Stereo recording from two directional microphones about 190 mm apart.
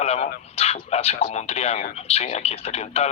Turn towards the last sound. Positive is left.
turn(degrees=35)  # may be behind; listen again after turning